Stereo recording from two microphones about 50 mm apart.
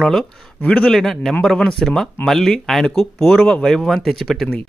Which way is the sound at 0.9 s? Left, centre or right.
Centre.